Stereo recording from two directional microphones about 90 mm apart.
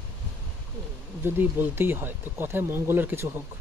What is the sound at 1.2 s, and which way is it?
Speech, 25° right (ahead or behind).